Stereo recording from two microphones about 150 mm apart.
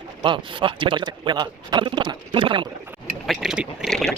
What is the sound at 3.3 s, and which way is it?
Speech, 5° right (ahead or behind).